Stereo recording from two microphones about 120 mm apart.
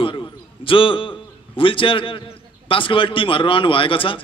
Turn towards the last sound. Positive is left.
turn(degrees=45)  # may be behind; listen again after turning